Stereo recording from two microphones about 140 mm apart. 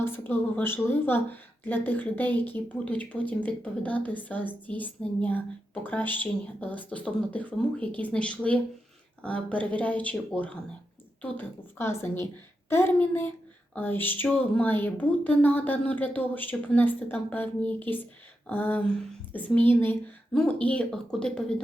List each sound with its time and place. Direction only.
0.0 s a woman's voice: 15° left (ahead or behind)